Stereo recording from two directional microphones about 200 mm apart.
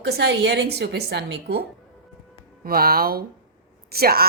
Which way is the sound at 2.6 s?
50° right (ahead or behind).